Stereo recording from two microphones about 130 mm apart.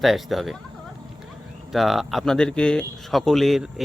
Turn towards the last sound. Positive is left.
turn(degrees=0)  # may be behind; listen again after turning